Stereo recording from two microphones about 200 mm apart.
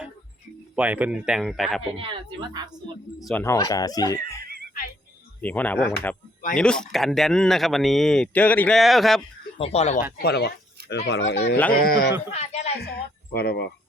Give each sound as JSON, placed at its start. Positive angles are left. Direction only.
{"t": 0.8, "sound": "speech", "side_deg": -5}
{"t": 2.0, "sound": "speech", "side_deg": -20}
{"t": 3.2, "sound": "speech", "side_deg": 10}
{"t": 5.4, "sound": "speech", "side_deg": 10}
{"t": 9.6, "sound": "speech", "side_deg": 30}
{"t": 12.3, "sound": "speech", "side_deg": 35}
{"t": 12.8, "sound": "speech", "side_deg": 55}